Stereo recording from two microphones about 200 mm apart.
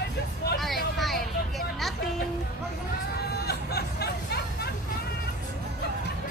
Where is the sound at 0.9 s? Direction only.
Centre (ahead or behind).